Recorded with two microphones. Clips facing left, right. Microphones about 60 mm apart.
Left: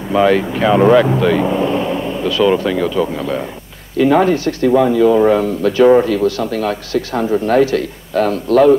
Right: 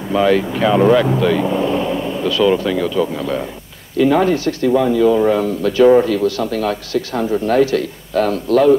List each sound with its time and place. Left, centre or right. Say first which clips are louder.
0.1 s speech: left 2 dB; left